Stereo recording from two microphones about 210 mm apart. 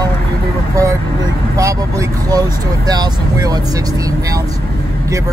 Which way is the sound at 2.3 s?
20° right (ahead or behind).